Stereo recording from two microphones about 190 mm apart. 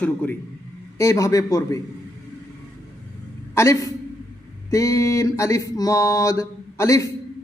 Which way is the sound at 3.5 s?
15° left (ahead or behind).